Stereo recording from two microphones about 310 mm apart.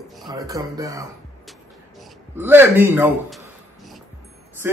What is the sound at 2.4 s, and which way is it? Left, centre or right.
A man's voice, centre.